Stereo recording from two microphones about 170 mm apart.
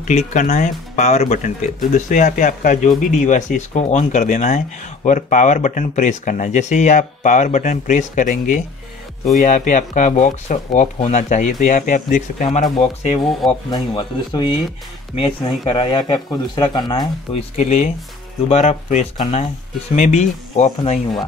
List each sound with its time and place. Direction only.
0.3 s speech: 50° left (ahead or behind)
13.7 s speech: 25° left (ahead or behind)
17.3 s speech: 40° left (ahead or behind)